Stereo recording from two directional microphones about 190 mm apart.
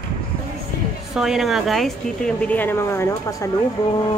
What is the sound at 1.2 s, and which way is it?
A woman's voice, centre (ahead or behind).